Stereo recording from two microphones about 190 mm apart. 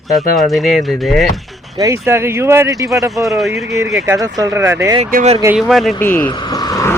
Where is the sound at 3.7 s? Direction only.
15° right (ahead or behind).